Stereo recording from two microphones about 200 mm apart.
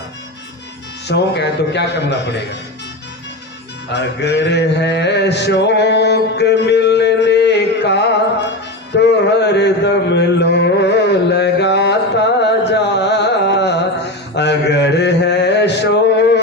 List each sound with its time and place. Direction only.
1.0 s a man's voice: 60° left (ahead or behind)
3.9 s a sound: 60° left (ahead or behind)
8.9 s music: 60° left (ahead or behind)